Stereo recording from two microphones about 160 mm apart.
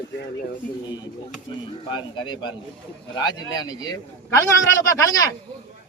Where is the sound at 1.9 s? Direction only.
30° left (ahead or behind).